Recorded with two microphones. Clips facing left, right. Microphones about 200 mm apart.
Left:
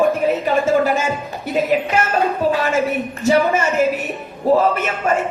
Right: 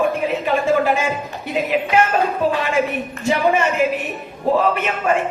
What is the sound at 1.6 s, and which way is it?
Speech, 45° left (ahead or behind).